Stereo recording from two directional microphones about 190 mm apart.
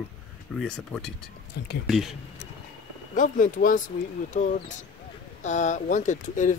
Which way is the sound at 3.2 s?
45° left (ahead or behind).